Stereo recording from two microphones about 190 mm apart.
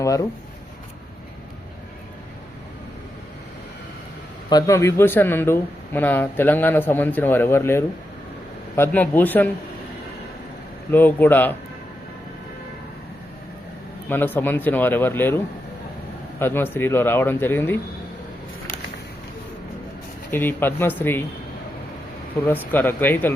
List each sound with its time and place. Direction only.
0.0 s speech: 20° left (ahead or behind)
4.4 s speech: 20° left (ahead or behind)
10.9 s speech: 10° left (ahead or behind)
14.1 s speech: 10° left (ahead or behind)
16.4 s speech: 10° left (ahead or behind)
20.3 s speech: 10° left (ahead or behind)
22.4 s speech: 10° left (ahead or behind)